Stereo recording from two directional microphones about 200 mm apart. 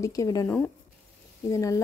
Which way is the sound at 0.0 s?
15° left (ahead or behind).